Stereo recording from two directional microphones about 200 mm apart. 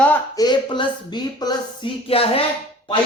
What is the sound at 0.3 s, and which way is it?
A man's voice, 20° left (ahead or behind).